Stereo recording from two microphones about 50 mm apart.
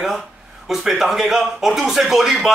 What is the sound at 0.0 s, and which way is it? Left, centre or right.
Speech, centre.